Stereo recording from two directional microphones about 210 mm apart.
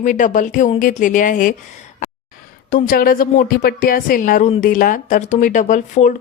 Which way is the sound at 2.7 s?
45° left (ahead or behind).